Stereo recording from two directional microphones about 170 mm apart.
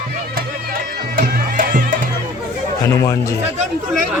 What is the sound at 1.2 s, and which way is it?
Music, 55° right (ahead or behind).